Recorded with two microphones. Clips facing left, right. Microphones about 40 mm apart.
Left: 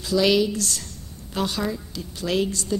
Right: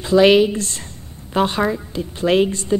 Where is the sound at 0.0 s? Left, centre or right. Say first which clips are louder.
Right 8 dB; right.